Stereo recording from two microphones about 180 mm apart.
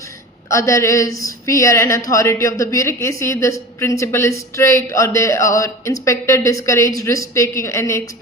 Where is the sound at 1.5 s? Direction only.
15° left (ahead or behind).